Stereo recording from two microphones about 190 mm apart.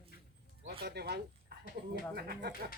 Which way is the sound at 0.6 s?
60° right (ahead or behind).